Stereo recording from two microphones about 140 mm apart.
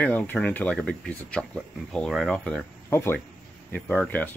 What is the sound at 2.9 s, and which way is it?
Speech, 15° left (ahead or behind).